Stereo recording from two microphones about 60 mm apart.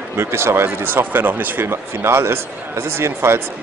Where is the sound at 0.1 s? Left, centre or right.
Right.